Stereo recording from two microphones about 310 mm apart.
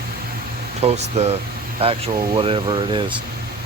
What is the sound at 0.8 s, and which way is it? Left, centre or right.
Speech, right.